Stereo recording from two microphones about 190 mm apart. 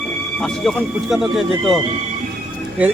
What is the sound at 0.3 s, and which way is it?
Speech, centre (ahead or behind).